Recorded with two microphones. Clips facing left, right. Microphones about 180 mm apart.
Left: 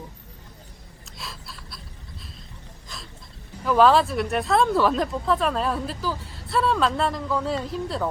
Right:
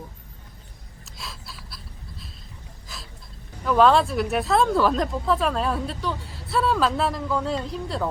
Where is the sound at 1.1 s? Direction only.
Centre (ahead or behind).